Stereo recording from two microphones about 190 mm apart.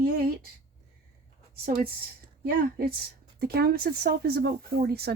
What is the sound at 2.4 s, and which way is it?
A woman's voice, 50° right (ahead or behind).